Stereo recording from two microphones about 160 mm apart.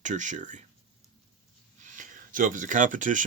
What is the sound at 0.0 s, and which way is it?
Speech, 50° right (ahead or behind).